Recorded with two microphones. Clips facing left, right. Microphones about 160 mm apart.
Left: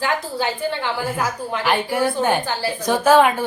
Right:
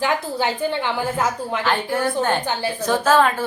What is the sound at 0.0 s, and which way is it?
A woman's voice, 20° right (ahead or behind).